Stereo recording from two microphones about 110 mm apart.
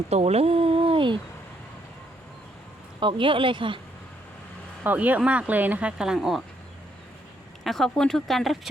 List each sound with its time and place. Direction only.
0.1 s speech: 75° right (ahead or behind); by 1.2 s 50° right (ahead or behind)
3.0 s speech: 50° right (ahead or behind)
4.8 s speech: 15° right (ahead or behind)
7.6 s speech: centre (ahead or behind)